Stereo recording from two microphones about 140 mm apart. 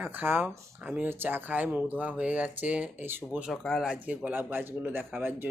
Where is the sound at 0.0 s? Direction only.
15° right (ahead or behind).